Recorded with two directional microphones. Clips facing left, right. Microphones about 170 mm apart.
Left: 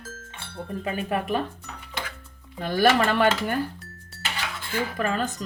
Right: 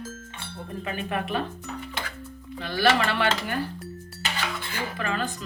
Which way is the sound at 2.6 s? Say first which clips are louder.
Left 3 dB; 45° left (ahead or behind).